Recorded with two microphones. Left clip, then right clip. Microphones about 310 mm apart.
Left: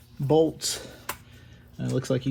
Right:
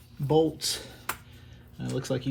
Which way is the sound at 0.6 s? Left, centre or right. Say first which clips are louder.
Even; centre.